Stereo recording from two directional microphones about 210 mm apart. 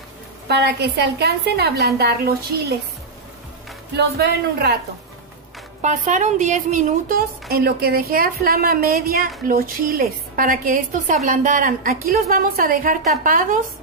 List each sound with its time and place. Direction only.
0.5 s a woman's voice: 50° right (ahead or behind)
3.9 s a woman's voice: 50° right (ahead or behind)
5.8 s a woman's voice: 35° right (ahead or behind)
7.4 s a woman's voice: 50° right (ahead or behind)